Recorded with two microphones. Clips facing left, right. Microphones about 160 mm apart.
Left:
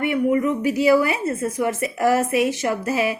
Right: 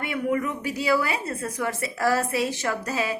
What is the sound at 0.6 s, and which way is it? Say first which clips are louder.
Speech: left 9 dB; 55° left (ahead or behind).